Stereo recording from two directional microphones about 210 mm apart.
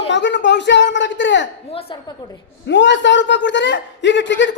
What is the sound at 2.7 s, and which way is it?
A man's voice, 60° left (ahead or behind).